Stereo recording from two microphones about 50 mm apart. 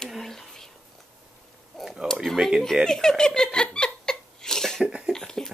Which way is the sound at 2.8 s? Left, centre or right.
Centre.